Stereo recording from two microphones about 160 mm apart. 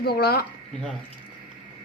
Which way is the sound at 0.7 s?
5° left (ahead or behind).